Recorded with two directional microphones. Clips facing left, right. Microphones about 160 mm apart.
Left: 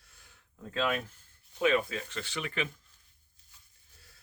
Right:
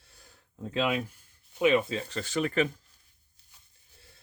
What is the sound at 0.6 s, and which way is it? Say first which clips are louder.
Speech: right 3 dB; 15° right (ahead or behind).